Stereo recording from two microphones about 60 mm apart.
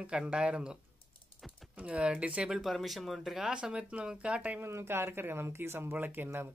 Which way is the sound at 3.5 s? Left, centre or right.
Centre.